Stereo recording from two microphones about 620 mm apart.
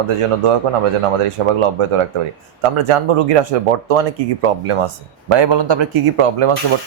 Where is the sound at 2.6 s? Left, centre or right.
Right.